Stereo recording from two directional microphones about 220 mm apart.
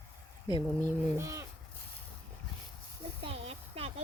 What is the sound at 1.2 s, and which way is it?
Speech, 10° right (ahead or behind).